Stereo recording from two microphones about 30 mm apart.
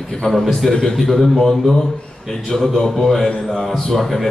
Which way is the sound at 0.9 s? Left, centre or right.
Centre.